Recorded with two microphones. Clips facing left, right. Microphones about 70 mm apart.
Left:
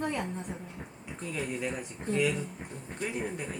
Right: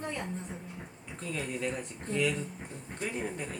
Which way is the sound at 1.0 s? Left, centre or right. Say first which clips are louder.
Left 1 dB; centre.